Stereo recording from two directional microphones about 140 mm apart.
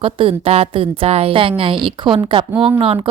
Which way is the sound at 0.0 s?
40° right (ahead or behind).